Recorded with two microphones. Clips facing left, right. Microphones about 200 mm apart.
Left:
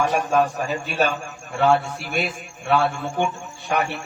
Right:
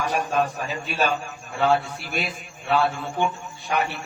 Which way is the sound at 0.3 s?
55° left (ahead or behind).